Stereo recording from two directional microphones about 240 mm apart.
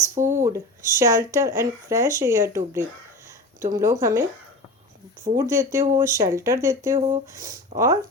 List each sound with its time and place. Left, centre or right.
0.1 s speech: centre
5.4 s speech: centre
7.7 s speech: right